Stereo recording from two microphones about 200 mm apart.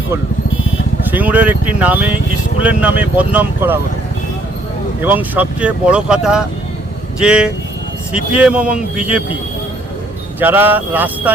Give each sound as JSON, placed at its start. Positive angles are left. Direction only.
{"t": 1.1, "sound": "speech", "side_deg": -10}
{"t": 5.0, "sound": "speech", "side_deg": -10}
{"t": 10.4, "sound": "speech", "side_deg": -10}